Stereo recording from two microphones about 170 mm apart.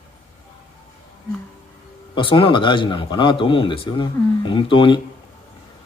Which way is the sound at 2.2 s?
30° left (ahead or behind).